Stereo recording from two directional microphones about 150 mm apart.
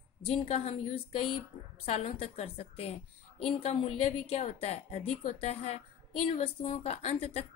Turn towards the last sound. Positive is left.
turn(degrees=40)  # may be behind; listen again after turning